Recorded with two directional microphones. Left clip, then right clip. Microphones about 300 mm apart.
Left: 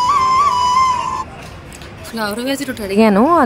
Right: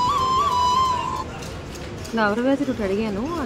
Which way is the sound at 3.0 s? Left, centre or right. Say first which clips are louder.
Left 15 dB; left.